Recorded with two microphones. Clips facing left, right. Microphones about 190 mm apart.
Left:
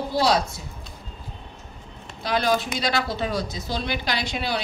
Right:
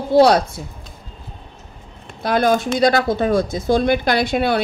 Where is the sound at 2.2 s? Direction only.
50° right (ahead or behind).